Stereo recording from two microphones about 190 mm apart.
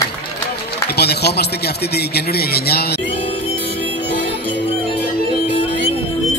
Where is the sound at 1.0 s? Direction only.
60° left (ahead or behind).